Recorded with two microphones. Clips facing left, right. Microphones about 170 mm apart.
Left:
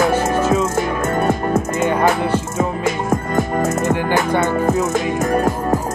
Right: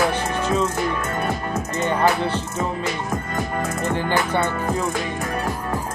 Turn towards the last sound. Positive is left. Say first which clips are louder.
# left 8 dB
turn(degrees=45)  # may be behind; listen again after turning